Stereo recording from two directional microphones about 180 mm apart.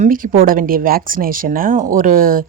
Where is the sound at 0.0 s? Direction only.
50° right (ahead or behind).